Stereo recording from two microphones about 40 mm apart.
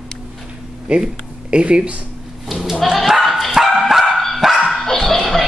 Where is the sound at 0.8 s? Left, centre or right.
Right.